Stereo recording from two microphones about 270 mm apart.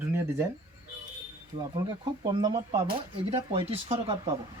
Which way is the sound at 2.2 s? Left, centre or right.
Centre.